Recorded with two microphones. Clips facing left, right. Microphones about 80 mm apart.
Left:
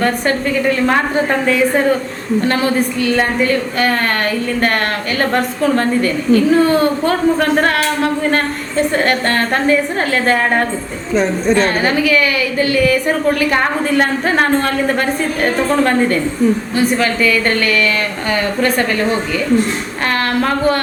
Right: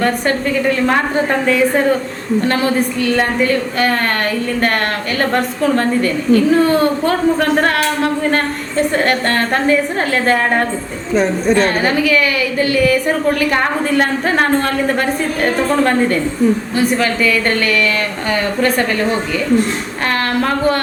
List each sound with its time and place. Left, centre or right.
0.0 s a woman's voice: centre